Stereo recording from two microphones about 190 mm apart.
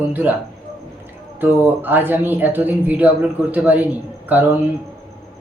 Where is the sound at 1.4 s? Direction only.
10° right (ahead or behind).